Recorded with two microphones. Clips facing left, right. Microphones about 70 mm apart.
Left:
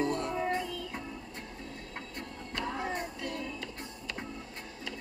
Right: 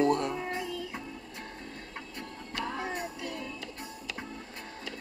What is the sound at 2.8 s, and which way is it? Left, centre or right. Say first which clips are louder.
Music: even; centre.